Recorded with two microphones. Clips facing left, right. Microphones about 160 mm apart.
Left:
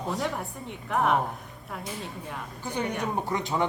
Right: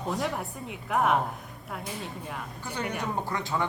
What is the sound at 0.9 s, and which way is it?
Speech, 5° right (ahead or behind).